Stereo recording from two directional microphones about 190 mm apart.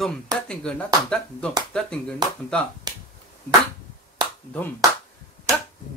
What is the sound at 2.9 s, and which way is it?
Finger snapping, 20° right (ahead or behind).